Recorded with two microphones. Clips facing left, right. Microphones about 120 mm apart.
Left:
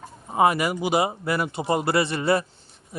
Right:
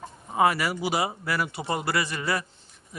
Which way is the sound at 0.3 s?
20° left (ahead or behind).